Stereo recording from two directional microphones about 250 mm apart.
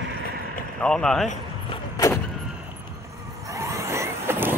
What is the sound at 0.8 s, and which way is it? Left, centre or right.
Speech, centre.